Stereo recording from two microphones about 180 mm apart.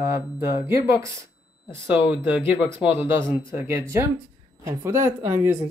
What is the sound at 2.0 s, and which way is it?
Speech, 10° right (ahead or behind).